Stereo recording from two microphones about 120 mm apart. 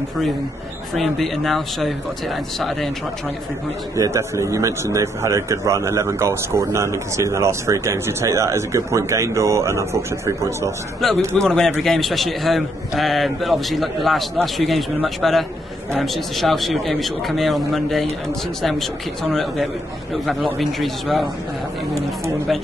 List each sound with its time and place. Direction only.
0.9 s a man's voice: centre (ahead or behind)
3.9 s a man's voice: 25° right (ahead or behind)
11.3 s a man's voice: 5° left (ahead or behind)
20.5 s a man's voice: centre (ahead or behind)